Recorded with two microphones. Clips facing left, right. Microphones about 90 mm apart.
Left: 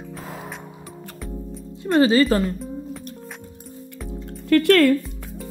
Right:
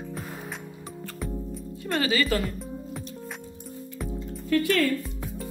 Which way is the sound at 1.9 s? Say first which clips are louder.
Left 9 dB; 35° left (ahead or behind).